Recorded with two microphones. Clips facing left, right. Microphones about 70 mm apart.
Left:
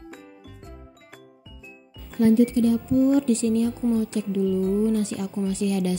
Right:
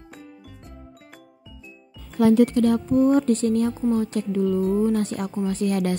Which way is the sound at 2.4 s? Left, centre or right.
Right.